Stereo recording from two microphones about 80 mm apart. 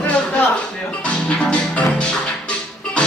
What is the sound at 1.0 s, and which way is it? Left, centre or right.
Music, centre.